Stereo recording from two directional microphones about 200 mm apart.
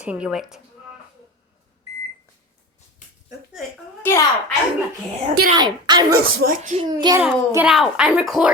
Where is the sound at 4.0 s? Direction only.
10° left (ahead or behind).